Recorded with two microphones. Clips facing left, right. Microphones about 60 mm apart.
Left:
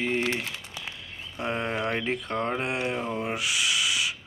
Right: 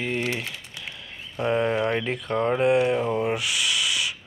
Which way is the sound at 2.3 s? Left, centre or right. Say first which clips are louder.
Right 12 dB; right.